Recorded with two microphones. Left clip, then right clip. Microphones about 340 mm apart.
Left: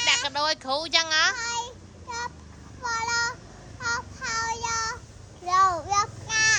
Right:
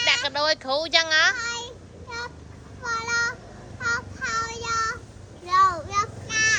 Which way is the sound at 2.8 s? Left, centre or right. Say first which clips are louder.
Right 1 dB; centre.